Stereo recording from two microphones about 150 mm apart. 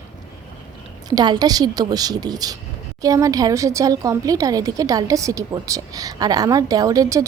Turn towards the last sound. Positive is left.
turn(degrees=-20)  # may be behind; listen again after turning